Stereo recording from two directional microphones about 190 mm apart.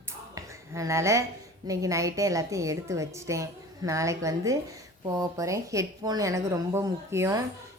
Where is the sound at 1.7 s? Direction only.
15° right (ahead or behind).